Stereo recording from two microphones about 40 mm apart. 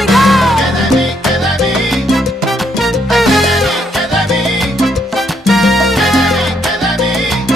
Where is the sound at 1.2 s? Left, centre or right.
Centre.